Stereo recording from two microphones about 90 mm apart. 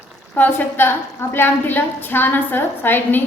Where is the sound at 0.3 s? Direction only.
20° left (ahead or behind).